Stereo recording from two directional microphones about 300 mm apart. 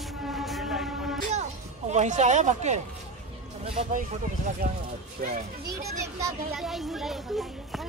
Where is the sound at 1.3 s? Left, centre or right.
Right.